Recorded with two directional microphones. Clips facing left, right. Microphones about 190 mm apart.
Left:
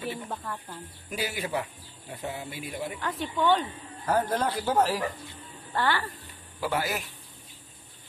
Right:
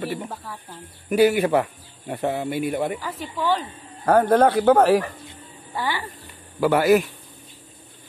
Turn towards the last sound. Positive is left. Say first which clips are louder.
# right 13 dB
turn(degrees=-65)  # may be behind; listen again after turning